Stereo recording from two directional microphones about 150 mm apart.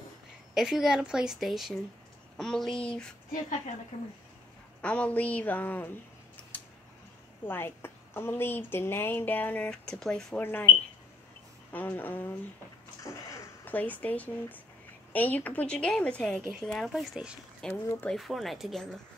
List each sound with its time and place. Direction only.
0.6 s a woman's voice: 5° right (ahead or behind)
4.8 s a woman's voice: 10° left (ahead or behind)
6.5 s tick-tock: 10° left (ahead or behind)
7.4 s a woman's voice: 15° left (ahead or behind)
10.4 s a woman's voice: 15° left (ahead or behind)